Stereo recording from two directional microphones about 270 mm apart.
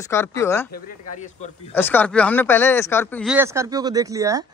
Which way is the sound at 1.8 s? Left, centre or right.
Centre.